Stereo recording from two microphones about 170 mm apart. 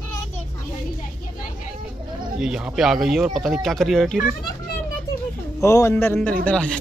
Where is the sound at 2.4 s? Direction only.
5° right (ahead or behind).